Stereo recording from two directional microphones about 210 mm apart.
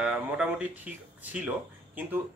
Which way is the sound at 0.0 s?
5° right (ahead or behind).